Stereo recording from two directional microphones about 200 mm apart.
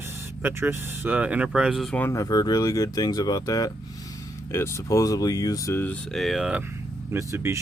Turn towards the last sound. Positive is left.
turn(degrees=-15)  # may be behind; listen again after turning